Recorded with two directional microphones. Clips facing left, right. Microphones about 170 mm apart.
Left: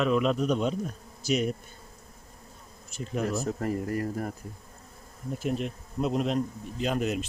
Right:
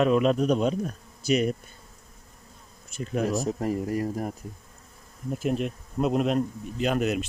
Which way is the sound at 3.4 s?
15° right (ahead or behind).